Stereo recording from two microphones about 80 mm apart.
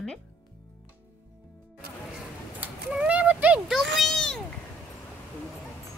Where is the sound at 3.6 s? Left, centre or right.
Centre.